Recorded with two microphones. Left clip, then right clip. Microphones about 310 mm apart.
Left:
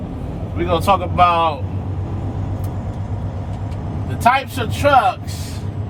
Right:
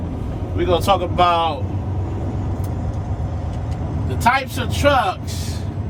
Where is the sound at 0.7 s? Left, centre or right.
Centre.